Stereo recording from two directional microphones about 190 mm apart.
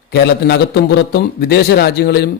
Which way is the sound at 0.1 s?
60° left (ahead or behind).